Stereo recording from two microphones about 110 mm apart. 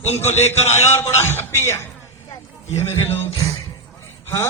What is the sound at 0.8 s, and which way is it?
Speech, 25° left (ahead or behind).